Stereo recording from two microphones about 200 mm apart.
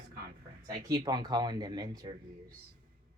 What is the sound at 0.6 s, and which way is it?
Speech, 20° right (ahead or behind).